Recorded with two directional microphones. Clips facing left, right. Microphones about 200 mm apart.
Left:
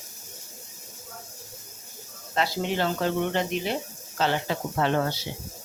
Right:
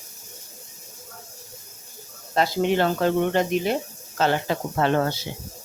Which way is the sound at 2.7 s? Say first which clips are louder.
Right 4 dB; 55° right (ahead or behind).